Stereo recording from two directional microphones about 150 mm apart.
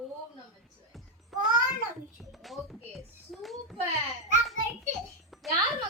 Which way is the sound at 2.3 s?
Centre (ahead or behind).